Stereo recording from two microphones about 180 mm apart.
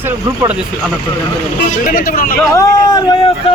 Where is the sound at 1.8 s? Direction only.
50° left (ahead or behind).